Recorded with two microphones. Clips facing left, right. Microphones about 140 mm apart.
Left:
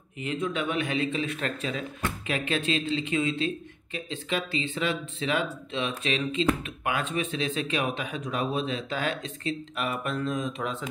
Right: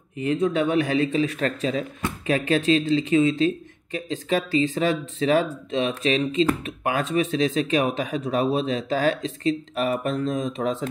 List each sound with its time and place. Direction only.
0.2 s speech: 35° right (ahead or behind)